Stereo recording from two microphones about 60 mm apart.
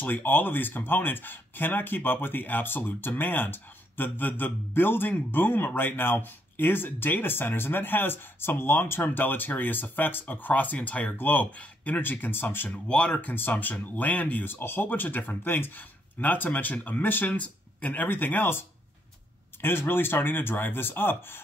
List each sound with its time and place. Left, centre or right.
0.0 s speech: left
19.6 s speech: left